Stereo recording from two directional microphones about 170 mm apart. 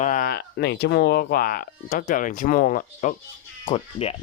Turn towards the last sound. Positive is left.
turn(degrees=35)  # may be behind; listen again after turning